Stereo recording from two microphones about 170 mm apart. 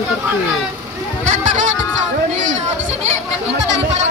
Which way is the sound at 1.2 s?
50° right (ahead or behind).